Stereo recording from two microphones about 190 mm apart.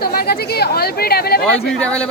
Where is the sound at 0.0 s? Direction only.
55° left (ahead or behind).